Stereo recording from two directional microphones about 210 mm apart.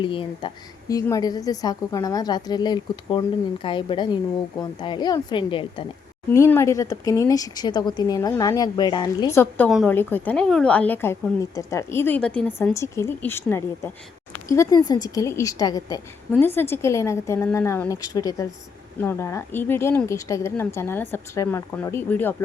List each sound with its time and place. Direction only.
0.0 s a woman's voice: 25° left (ahead or behind)
6.3 s speech: 15° left (ahead or behind)